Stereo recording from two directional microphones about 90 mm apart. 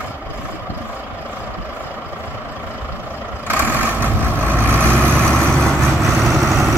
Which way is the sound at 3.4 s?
20° right (ahead or behind).